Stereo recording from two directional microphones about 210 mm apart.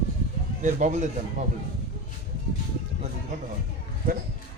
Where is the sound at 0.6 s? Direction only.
35° right (ahead or behind).